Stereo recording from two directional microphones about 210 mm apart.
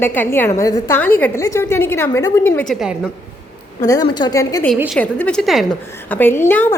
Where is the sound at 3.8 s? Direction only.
20° left (ahead or behind).